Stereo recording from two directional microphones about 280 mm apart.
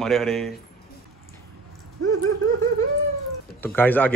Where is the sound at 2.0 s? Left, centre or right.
Right.